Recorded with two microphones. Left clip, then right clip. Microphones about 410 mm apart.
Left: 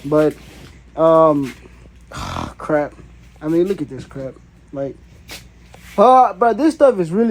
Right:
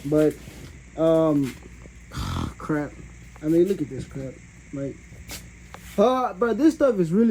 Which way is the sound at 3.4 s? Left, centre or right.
Left.